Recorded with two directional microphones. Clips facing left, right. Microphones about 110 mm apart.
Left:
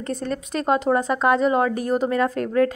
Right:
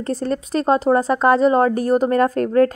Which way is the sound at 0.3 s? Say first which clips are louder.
Right 4 dB; 35° right (ahead or behind).